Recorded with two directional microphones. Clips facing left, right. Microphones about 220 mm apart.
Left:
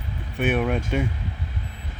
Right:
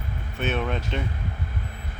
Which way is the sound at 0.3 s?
15° left (ahead or behind).